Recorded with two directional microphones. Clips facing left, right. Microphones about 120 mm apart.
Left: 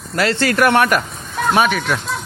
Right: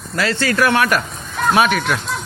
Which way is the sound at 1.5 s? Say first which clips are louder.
Even; centre (ahead or behind).